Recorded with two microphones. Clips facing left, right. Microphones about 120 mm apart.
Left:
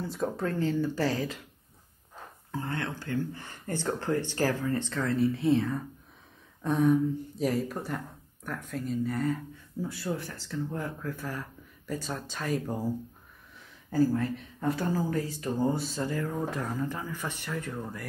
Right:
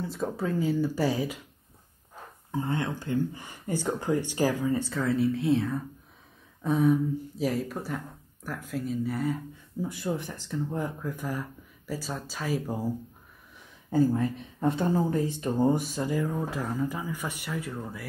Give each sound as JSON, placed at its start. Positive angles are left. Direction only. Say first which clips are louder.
{"t": 0.0, "sound": "speech", "louder": "even", "side_deg": 0}
{"t": 2.5, "sound": "speech", "louder": "right 4 dB", "side_deg": -20}
{"t": 13.8, "sound": "speech", "louder": "right 2 dB", "side_deg": -20}